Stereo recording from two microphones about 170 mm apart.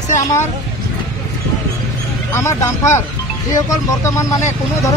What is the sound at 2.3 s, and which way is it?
Speech, 15° left (ahead or behind).